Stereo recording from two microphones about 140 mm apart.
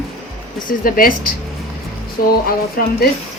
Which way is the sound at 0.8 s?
90° left.